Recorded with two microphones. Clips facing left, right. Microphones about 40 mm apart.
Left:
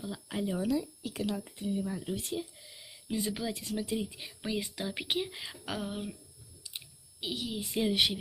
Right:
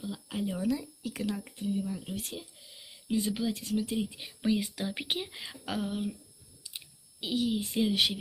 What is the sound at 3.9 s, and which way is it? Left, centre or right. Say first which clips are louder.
Speech: right 2 dB; centre.